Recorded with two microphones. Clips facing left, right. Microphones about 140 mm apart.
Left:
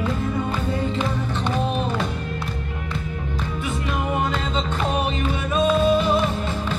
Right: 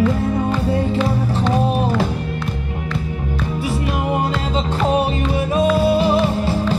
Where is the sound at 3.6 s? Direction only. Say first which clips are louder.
Right 4 dB; 30° right (ahead or behind).